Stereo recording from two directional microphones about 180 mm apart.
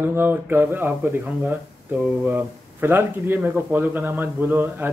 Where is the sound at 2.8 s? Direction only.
15° right (ahead or behind).